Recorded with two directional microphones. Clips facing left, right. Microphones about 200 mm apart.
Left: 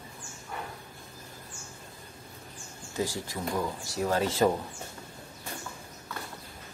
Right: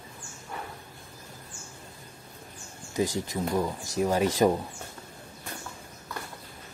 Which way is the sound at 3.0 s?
20° right (ahead or behind).